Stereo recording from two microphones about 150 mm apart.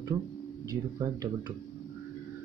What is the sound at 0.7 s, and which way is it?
Speech, 25° right (ahead or behind).